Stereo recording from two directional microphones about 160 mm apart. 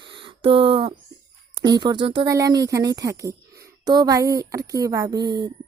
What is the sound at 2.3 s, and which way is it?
Speech, 20° right (ahead or behind).